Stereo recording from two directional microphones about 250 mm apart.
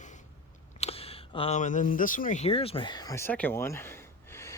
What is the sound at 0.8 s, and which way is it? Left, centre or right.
Speech, left.